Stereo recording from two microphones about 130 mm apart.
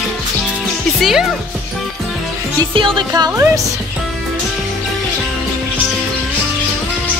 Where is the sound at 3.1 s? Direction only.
20° right (ahead or behind).